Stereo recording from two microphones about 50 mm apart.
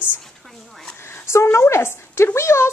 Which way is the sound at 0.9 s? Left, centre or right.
Left.